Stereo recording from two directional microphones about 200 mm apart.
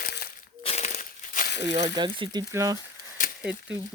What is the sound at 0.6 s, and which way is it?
Crumpling, 30° left (ahead or behind).